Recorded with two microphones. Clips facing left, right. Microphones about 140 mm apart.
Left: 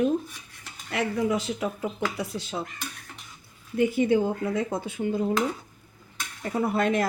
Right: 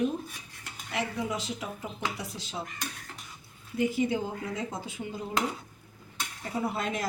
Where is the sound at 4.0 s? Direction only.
60° left (ahead or behind).